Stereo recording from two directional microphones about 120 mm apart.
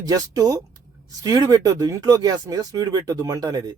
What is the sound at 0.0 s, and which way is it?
Speech, 30° right (ahead or behind).